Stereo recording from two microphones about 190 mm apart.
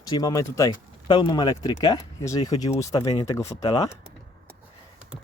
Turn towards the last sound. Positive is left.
turn(degrees=20)  # may be behind; listen again after turning